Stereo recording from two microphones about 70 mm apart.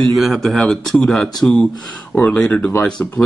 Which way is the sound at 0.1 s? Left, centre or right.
Centre.